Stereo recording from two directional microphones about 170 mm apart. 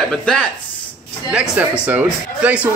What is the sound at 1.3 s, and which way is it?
A man's voice, 5° right (ahead or behind).